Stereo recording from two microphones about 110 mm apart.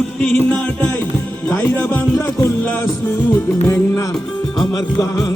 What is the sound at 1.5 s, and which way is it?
Music, 20° left (ahead or behind).